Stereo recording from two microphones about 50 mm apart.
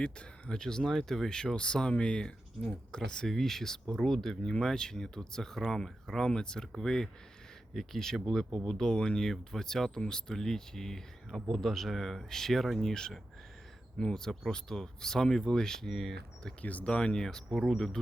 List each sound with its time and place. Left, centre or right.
0.0 s speech: left; by 16.1 s centre
16.6 s speech: left
16.9 s speech: centre